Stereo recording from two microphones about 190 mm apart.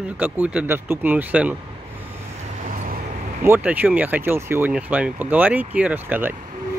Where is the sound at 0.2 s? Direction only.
5° right (ahead or behind).